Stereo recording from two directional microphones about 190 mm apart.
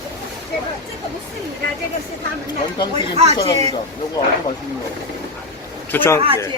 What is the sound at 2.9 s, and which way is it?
Speech, 35° right (ahead or behind).